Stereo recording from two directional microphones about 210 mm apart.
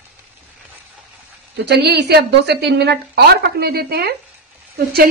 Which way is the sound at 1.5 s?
50° right (ahead or behind).